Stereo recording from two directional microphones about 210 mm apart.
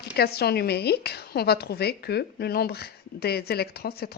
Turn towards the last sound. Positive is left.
turn(degrees=50)  # may be behind; listen again after turning